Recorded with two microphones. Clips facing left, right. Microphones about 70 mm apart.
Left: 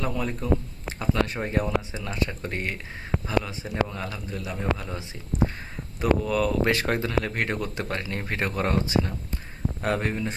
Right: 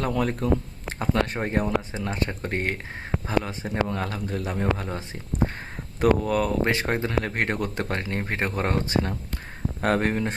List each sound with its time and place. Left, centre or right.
0.0 s speech: right
0.3 s speech: right
6.7 s speech: right